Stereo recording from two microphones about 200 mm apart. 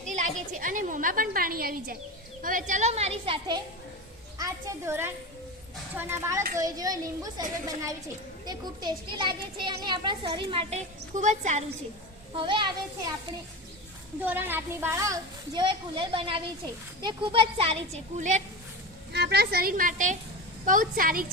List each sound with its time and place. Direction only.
0.0 s a woman's voice: 40° right (ahead or behind); by 7.4 s 20° right (ahead or behind)
8.4 s a child's voice: 20° right (ahead or behind); by 11.6 s 35° right (ahead or behind)
12.4 s a child's voice: 25° right (ahead or behind)
14.2 s a child's voice: 10° right (ahead or behind); by 18.4 s 35° right (ahead or behind)
19.1 s a woman's voice: 55° right (ahead or behind)